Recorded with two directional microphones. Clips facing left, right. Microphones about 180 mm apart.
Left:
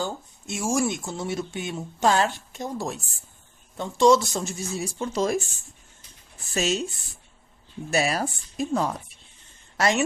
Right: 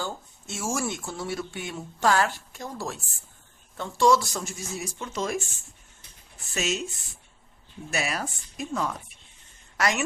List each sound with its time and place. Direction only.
0.0 s speech: 15° left (ahead or behind); by 5.4 s 35° left (ahead or behind)
6.5 s speech: 35° left (ahead or behind)
7.9 s a woman's voice: 35° left (ahead or behind)